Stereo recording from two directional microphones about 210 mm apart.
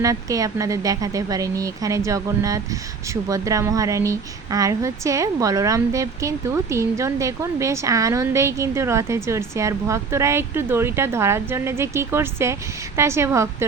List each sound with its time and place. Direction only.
0.0 s speech: 15° right (ahead or behind)